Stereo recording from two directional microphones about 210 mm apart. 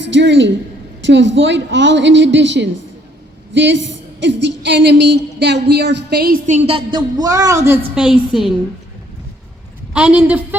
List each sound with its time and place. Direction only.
0.0 s a woman's voice: 60° right (ahead or behind); by 7.8 s 15° right (ahead or behind)
7.9 s a woman's voice: 5° right (ahead or behind)
9.9 s a woman's voice: 5° right (ahead or behind)